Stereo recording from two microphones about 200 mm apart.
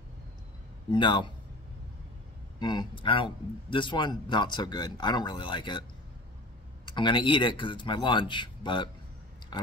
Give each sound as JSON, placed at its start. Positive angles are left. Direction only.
{"t": 0.9, "sound": "a man's voice", "side_deg": 25}
{"t": 2.6, "sound": "a man's voice", "side_deg": 20}
{"t": 6.9, "sound": "a man's voice", "side_deg": 25}